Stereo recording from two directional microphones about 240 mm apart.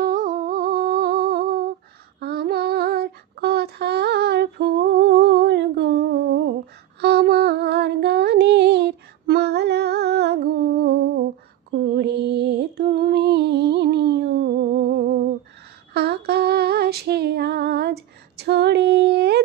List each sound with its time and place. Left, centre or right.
0.0 s humming: right
2.1 s female singing: right
7.0 s a sound: right
11.8 s music: right
15.9 s female singing: right